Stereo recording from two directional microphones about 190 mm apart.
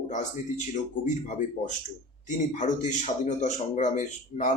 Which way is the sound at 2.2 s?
40° left (ahead or behind).